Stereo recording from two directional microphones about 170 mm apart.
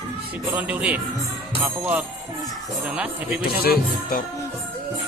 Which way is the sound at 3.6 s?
65° left (ahead or behind).